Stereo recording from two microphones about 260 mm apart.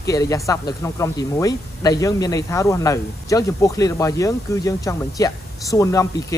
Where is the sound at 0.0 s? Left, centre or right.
Centre.